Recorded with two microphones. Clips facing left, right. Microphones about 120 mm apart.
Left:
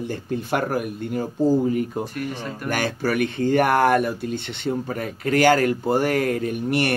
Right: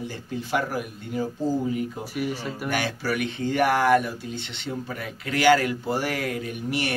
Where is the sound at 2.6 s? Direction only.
45° left (ahead or behind).